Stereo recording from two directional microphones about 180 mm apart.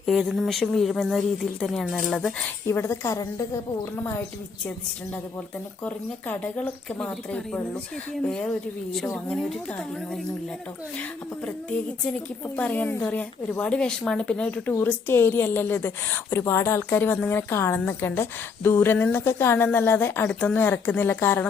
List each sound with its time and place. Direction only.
0.0 s a woman's voice: centre (ahead or behind)
2.6 s speech: 15° left (ahead or behind)
5.8 s a woman's voice: 10° left (ahead or behind)
12.5 s speech: 10° left (ahead or behind)